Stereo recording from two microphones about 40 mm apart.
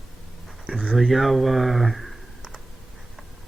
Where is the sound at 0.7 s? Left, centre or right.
Centre.